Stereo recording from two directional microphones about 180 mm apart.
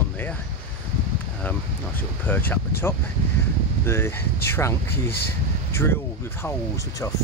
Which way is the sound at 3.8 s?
15° left (ahead or behind).